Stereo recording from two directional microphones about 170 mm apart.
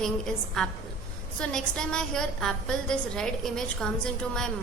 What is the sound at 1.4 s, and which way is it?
A woman's voice, 5° left (ahead or behind).